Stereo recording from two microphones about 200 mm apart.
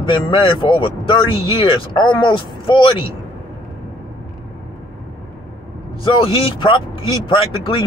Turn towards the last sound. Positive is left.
turn(degrees=25)  # may be behind; listen again after turning